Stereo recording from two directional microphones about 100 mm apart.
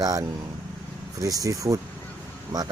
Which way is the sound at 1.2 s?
35° right (ahead or behind).